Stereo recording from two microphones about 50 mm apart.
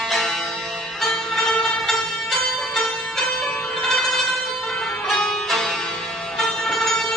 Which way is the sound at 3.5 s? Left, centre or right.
Left.